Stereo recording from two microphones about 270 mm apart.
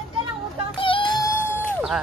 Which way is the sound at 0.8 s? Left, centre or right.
Centre.